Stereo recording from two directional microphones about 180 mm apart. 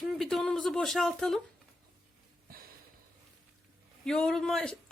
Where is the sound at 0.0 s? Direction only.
Centre (ahead or behind).